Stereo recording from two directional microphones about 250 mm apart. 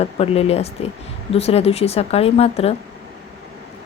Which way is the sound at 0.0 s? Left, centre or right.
Left.